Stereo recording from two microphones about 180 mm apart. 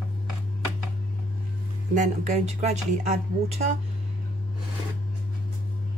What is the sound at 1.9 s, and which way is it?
Speech, 40° right (ahead or behind).